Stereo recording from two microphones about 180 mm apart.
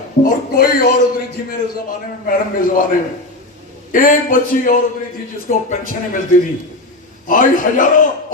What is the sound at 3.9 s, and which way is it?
Speech, 50° left (ahead or behind).